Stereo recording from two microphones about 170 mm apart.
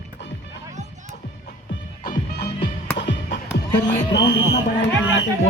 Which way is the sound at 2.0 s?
65° left (ahead or behind).